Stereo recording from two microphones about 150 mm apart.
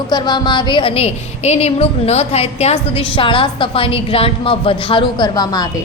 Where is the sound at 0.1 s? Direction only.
30° left (ahead or behind).